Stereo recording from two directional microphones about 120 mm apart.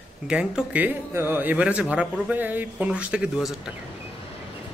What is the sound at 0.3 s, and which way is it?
Speech, 10° right (ahead or behind).